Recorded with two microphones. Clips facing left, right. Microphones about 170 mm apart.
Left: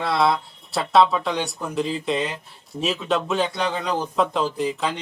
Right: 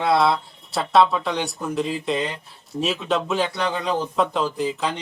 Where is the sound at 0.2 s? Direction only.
Centre (ahead or behind).